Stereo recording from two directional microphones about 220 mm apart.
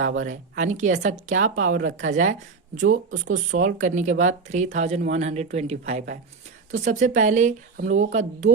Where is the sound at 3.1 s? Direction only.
70° right (ahead or behind).